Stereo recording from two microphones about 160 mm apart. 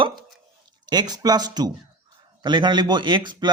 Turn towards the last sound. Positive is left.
turn(degrees=-30)  # may be behind; listen again after turning